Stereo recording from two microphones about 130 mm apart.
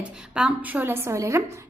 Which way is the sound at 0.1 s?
5° right (ahead or behind).